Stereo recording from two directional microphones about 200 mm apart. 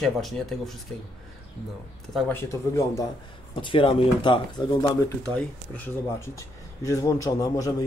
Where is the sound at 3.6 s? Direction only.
25° left (ahead or behind).